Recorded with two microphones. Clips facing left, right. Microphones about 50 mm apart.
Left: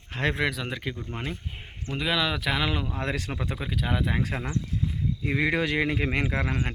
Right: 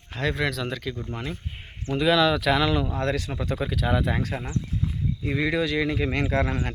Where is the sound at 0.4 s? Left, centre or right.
Centre.